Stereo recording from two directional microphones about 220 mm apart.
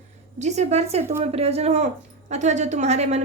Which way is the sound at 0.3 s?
30° right (ahead or behind).